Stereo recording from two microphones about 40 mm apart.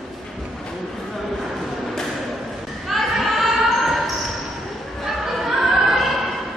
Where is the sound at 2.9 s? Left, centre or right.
Centre.